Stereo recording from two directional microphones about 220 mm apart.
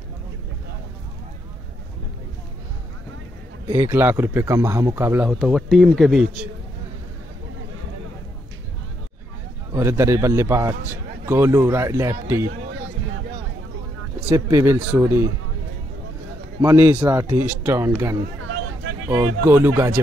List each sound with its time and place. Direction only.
3.6 s speech: 15° right (ahead or behind)
5.4 s speech: centre (ahead or behind)
9.8 s speech: 10° right (ahead or behind)
14.3 s speech: 10° right (ahead or behind)
16.6 s speech: 10° right (ahead or behind)
18.4 s vehicle: 75° right (ahead or behind)
19.0 s speech: 10° right (ahead or behind)